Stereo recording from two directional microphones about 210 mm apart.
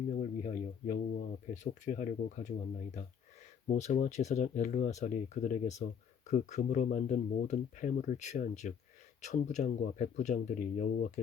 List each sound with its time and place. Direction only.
0.2 s speech: 35° left (ahead or behind)
3.8 s speech: 35° left (ahead or behind)